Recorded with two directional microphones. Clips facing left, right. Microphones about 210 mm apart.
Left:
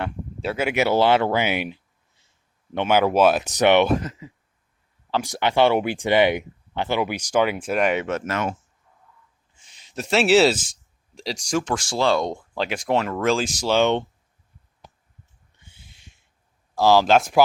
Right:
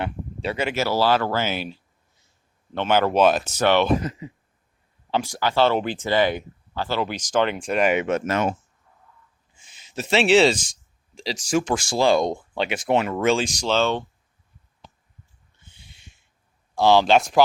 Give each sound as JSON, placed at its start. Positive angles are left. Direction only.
{"t": 0.0, "sound": "a sound", "side_deg": 5}
{"t": 0.7, "sound": "speech", "side_deg": 20}
{"t": 5.2, "sound": "speech", "side_deg": 20}
{"t": 8.0, "sound": "speech", "side_deg": -20}
{"t": 9.6, "sound": "speech", "side_deg": -5}
{"t": 15.6, "sound": "a sound", "side_deg": 5}
{"t": 16.7, "sound": "speech", "side_deg": 5}